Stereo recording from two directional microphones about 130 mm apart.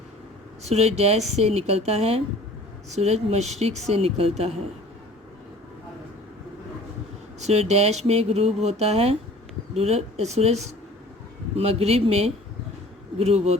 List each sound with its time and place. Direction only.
0.6 s speech: 55° right (ahead or behind)
7.3 s speech: 55° right (ahead or behind)